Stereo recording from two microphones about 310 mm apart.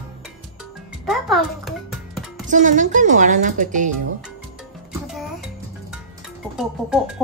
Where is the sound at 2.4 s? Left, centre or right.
Right.